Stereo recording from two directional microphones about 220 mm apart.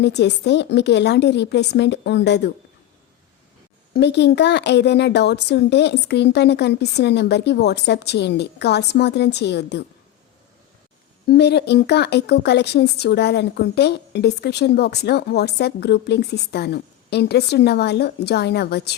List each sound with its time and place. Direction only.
0.0 s speech: 50° left (ahead or behind)
3.9 s speech: 50° left (ahead or behind)
11.3 s speech: 50° left (ahead or behind)